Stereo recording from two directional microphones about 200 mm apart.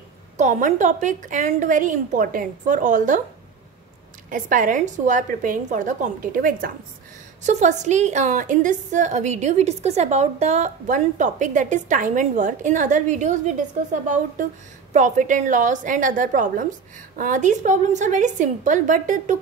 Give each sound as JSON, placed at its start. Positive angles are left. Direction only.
{"t": 0.4, "sound": "a woman's voice", "side_deg": -40}
{"t": 4.3, "sound": "a woman's voice", "side_deg": -45}